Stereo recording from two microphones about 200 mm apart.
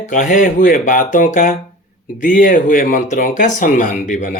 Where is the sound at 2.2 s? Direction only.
45° left (ahead or behind).